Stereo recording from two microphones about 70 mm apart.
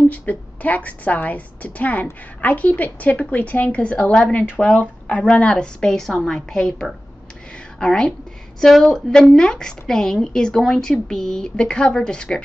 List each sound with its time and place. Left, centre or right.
0.1 s a woman's voice: left